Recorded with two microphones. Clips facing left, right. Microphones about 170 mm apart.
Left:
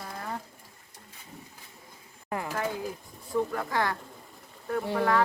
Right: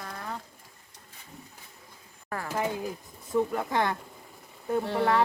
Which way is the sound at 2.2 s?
20° left (ahead or behind).